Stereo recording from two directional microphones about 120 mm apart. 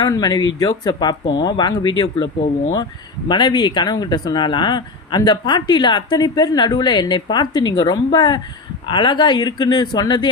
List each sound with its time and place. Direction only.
0.0 s speech: 35° left (ahead or behind)
3.2 s speech: 40° left (ahead or behind)